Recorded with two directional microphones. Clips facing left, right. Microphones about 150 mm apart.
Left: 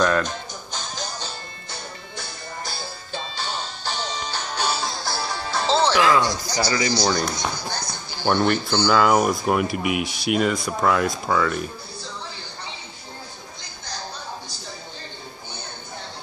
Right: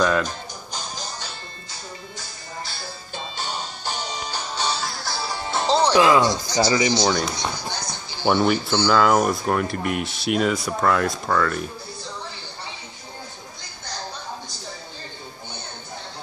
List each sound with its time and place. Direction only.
0.0 s music: 5° right (ahead or behind)
1.7 s music: 65° left (ahead or behind)
3.1 s music: 45° right (ahead or behind)
4.0 s music: 10° right (ahead or behind)
4.7 s music: 15° left (ahead or behind)
5.3 s speech: 20° right (ahead or behind)
7.1 s speech: centre (ahead or behind)